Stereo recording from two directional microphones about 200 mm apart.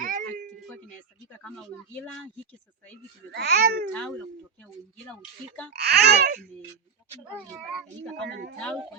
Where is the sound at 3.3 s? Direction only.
55° right (ahead or behind).